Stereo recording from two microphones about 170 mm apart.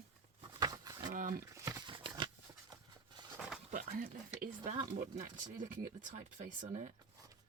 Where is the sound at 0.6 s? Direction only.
20° right (ahead or behind).